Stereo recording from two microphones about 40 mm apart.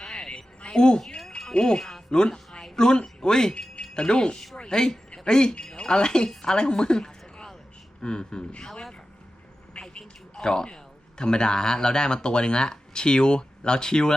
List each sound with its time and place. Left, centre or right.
0.0 s a sound: centre
1.0 s wind chime: centre
1.5 s speech: left
2.0 s a sound: left
2.7 s a woman's voice: centre
9.7 s vehicle: left
10.3 s speech: centre